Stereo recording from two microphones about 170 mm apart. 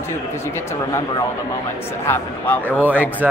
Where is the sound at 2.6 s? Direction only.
10° right (ahead or behind).